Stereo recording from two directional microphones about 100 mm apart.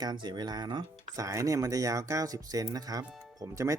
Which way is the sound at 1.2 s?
35° right (ahead or behind).